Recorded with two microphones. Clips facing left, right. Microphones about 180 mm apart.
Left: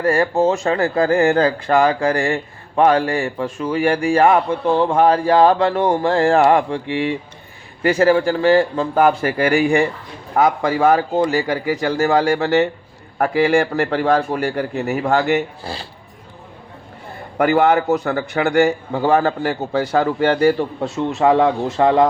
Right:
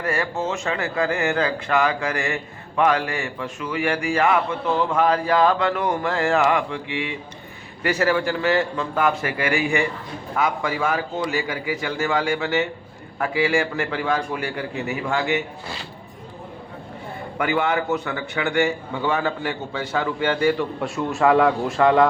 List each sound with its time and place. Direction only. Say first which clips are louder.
0.0 s speech: left 9 dB; 35° left (ahead or behind)
17.3 s speech: left 8 dB; 40° left (ahead or behind)
20.8 s a man's voice: left 3 dB; 20° left (ahead or behind)